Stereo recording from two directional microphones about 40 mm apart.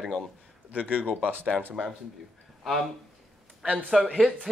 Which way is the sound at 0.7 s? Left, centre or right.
Right.